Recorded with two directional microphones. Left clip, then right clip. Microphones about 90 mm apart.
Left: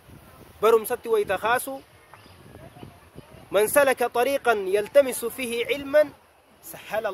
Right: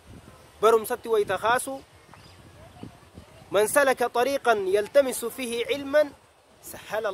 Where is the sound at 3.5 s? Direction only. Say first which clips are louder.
Left 1 dB; 20° right (ahead or behind).